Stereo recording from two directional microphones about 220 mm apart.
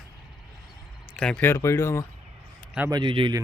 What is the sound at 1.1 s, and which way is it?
Speech, 5° left (ahead or behind).